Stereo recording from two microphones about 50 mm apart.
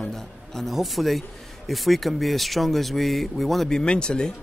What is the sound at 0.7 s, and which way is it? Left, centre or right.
Speech, centre.